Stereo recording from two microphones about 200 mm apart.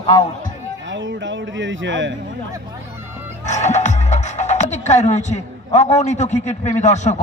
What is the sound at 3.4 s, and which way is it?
A man's voice, 35° left (ahead or behind).